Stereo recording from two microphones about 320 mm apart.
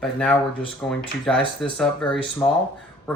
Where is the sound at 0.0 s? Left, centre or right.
Centre.